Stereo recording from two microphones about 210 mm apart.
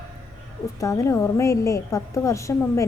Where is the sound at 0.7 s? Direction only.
15° left (ahead or behind).